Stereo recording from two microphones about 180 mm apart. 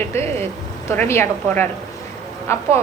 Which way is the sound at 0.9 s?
15° left (ahead or behind).